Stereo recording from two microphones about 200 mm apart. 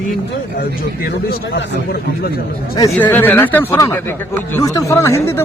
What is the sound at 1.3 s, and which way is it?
Speech, 50° left (ahead or behind).